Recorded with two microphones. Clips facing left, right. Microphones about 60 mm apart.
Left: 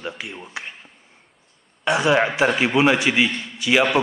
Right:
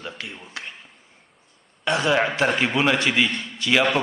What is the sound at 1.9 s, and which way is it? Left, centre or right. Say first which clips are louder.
A man's voice: left 3 dB; centre.